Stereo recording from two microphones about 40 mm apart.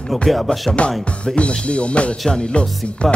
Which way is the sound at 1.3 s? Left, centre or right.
Left.